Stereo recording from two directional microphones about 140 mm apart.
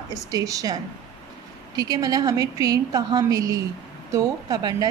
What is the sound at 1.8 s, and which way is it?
A woman's voice, 25° right (ahead or behind).